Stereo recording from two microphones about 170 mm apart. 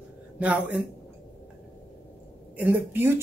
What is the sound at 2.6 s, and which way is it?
Speech, 10° right (ahead or behind).